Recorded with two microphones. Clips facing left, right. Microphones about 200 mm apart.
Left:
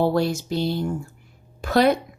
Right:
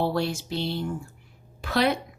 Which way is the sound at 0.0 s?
45° left (ahead or behind).